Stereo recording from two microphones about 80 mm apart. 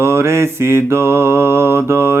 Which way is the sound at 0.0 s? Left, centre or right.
Right.